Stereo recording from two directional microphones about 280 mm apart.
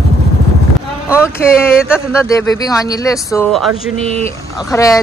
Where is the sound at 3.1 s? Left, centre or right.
Centre.